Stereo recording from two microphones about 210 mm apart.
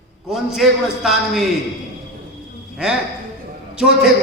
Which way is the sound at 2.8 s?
5° right (ahead or behind).